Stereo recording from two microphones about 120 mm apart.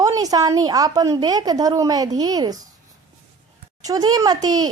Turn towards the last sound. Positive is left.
turn(degrees=-35)  # may be behind; listen again after turning